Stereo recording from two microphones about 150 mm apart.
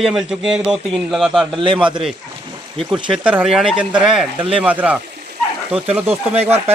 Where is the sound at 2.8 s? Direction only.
5° right (ahead or behind).